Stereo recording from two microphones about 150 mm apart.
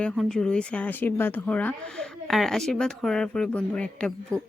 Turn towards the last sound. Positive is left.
turn(degrees=5)  # may be behind; listen again after turning